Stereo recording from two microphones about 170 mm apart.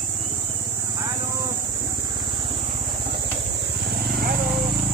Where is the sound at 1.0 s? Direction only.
20° right (ahead or behind).